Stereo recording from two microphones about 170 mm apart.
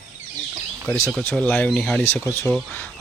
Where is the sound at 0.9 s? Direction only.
10° left (ahead or behind).